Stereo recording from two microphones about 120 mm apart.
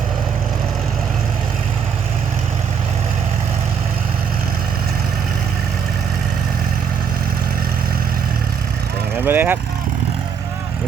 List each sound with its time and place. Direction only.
9.1 s speech: 15° right (ahead or behind)